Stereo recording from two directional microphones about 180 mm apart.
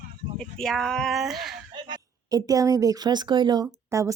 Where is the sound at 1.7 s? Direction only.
25° right (ahead or behind).